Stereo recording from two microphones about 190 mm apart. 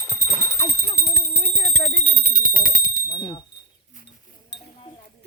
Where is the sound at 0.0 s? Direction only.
10° right (ahead or behind).